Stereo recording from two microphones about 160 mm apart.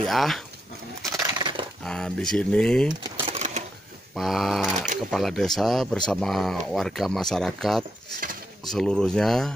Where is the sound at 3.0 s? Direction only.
35° right (ahead or behind).